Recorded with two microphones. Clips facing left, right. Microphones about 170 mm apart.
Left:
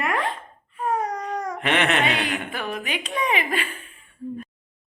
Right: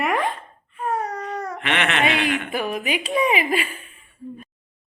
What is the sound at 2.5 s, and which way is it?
A woman's voice, 10° right (ahead or behind).